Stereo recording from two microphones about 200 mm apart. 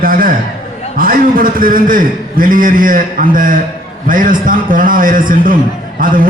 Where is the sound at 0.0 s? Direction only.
45° right (ahead or behind).